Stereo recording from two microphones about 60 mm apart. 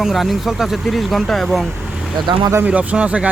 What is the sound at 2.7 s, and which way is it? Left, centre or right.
Speech, centre.